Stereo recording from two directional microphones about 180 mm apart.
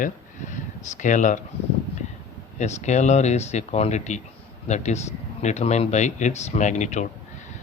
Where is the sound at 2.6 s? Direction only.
40° left (ahead or behind).